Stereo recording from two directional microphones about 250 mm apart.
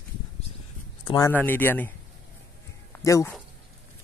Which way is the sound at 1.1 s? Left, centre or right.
Centre.